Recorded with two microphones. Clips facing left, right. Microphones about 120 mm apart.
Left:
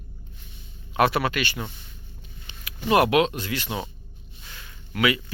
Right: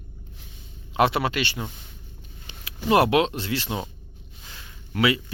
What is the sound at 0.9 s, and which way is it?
Speech, 25° right (ahead or behind).